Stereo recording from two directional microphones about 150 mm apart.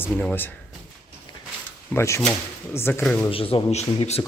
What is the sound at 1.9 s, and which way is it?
A man's voice, 20° left (ahead or behind).